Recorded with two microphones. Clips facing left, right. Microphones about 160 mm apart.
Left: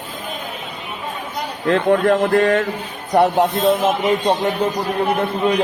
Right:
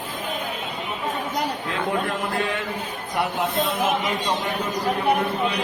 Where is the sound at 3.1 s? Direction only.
40° left (ahead or behind).